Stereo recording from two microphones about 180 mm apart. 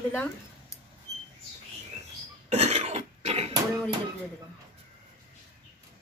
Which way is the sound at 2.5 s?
35° right (ahead or behind).